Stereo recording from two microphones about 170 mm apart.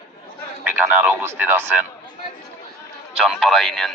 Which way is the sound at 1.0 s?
10° right (ahead or behind).